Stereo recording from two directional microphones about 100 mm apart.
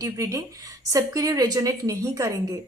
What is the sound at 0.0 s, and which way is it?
A woman's voice, 35° right (ahead or behind).